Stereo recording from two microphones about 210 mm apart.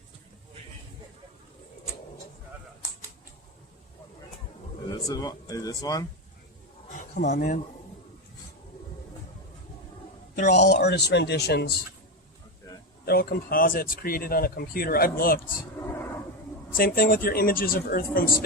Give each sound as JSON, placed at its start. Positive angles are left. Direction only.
{"t": 4.9, "sound": "speech", "side_deg": 20}
{"t": 7.3, "sound": "speech", "side_deg": 40}
{"t": 10.3, "sound": "speech", "side_deg": 35}
{"t": 10.7, "sound": "speech", "side_deg": 50}
{"t": 13.1, "sound": "speech", "side_deg": 45}
{"t": 15.9, "sound": "a sound", "side_deg": 10}
{"t": 16.7, "sound": "speech", "side_deg": 45}